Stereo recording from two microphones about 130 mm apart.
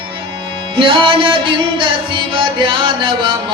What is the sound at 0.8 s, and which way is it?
Music, 40° right (ahead or behind).